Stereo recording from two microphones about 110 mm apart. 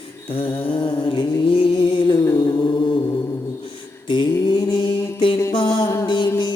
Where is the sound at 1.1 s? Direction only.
55° left (ahead or behind).